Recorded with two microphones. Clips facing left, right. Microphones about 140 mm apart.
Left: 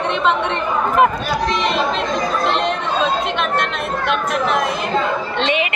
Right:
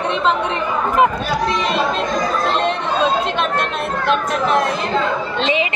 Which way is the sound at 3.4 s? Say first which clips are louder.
Even; 30° right (ahead or behind).